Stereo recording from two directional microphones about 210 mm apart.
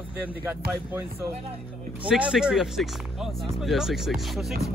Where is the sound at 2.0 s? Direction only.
5° right (ahead or behind).